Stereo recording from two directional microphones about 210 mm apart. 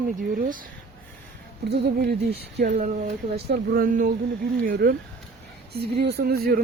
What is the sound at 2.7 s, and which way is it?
Speech, 35° right (ahead or behind).